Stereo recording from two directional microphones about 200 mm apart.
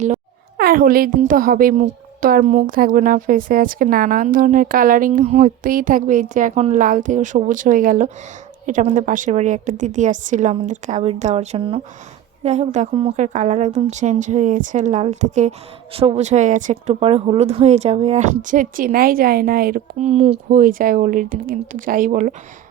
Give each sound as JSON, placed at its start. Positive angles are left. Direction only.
{"t": 0.5, "sound": "a woman's voice", "side_deg": -50}
{"t": 20.0, "sound": "a woman's voice", "side_deg": -30}